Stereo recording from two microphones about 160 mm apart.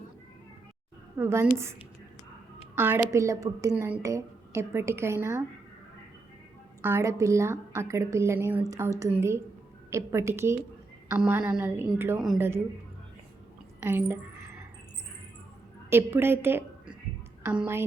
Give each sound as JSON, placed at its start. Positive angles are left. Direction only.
{"t": 1.2, "sound": "a woman's voice", "side_deg": -15}
{"t": 2.7, "sound": "a woman's voice", "side_deg": -10}
{"t": 6.8, "sound": "a woman's voice", "side_deg": -15}
{"t": 13.8, "sound": "a sound", "side_deg": -15}
{"t": 15.9, "sound": "a woman's voice", "side_deg": -15}